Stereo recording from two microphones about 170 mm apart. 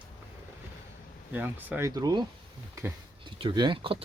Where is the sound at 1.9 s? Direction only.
25° right (ahead or behind).